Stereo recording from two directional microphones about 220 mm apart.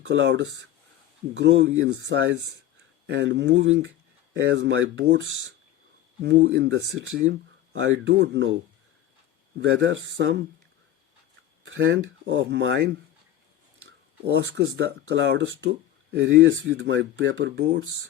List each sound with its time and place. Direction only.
0.0 s speech: 55° right (ahead or behind)
9.6 s speech: 60° right (ahead or behind)
11.6 s speech: 55° right (ahead or behind)
14.8 s speech: 55° right (ahead or behind)